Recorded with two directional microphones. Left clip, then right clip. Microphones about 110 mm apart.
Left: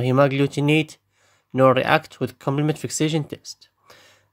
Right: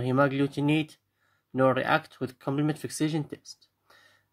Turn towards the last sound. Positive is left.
turn(degrees=65)  # may be behind; listen again after turning